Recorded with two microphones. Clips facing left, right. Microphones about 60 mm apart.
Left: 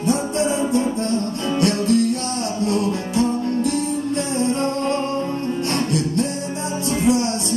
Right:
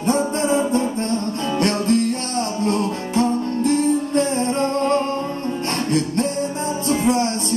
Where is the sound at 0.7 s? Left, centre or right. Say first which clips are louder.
Even; right.